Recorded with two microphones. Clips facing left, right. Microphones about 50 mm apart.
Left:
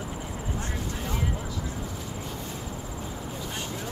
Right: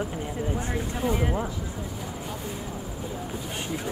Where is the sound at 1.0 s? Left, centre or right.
Centre.